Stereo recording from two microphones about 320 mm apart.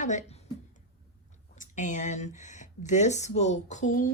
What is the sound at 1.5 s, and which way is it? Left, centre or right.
Speech, left.